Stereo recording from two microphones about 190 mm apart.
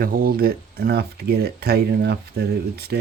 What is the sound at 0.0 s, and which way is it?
Speech, 50° right (ahead or behind).